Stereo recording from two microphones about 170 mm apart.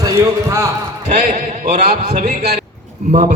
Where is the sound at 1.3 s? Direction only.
40° right (ahead or behind).